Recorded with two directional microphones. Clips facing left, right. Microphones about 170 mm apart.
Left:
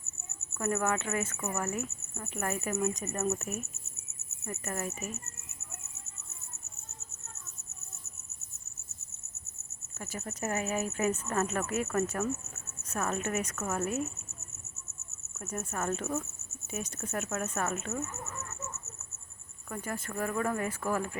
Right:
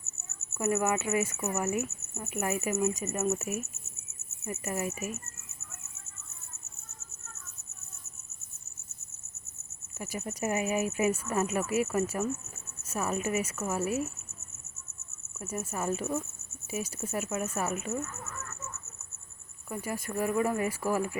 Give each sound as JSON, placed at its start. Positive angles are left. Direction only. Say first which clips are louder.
{"t": 0.5, "sound": "speech", "louder": "right 2 dB", "side_deg": -5}
{"t": 10.0, "sound": "speech", "louder": "right 3 dB", "side_deg": -15}
{"t": 15.4, "sound": "speech", "louder": "right 1 dB", "side_deg": -5}
{"t": 18.0, "sound": "chicken", "louder": "left 1 dB", "side_deg": 20}
{"t": 19.7, "sound": "speech", "louder": "right 3 dB", "side_deg": -10}